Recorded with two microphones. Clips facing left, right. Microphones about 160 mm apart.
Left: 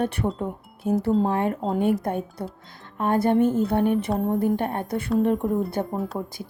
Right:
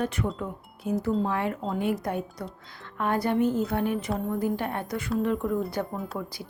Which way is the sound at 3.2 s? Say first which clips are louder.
Left 5 dB; 50° left (ahead or behind).